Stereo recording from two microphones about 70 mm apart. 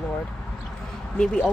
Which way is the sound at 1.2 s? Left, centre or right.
Centre.